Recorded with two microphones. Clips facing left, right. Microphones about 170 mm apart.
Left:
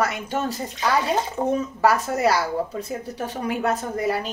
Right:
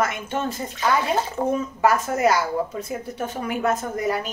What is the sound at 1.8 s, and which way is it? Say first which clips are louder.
A woman's voice: right 1 dB; 35° left (ahead or behind).